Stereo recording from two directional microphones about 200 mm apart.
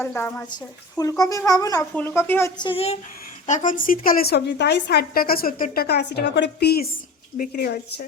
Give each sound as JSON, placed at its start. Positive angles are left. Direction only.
{"t": 0.0, "sound": "a child's voice", "side_deg": 10}
{"t": 2.6, "sound": "a woman's voice", "side_deg": 25}